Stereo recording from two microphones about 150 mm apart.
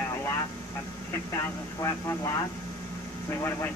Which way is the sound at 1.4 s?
20° left (ahead or behind).